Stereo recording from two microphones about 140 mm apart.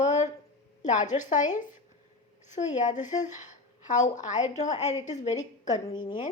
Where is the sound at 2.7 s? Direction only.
60° left (ahead or behind).